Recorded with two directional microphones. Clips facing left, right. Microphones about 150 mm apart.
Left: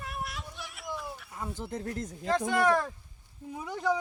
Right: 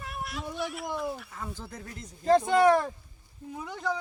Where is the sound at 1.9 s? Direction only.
50° left (ahead or behind).